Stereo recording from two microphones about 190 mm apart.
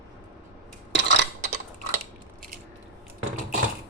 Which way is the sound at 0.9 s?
65° right (ahead or behind).